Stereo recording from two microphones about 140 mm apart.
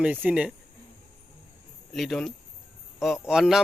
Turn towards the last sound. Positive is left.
turn(degrees=-5)  # may be behind; listen again after turning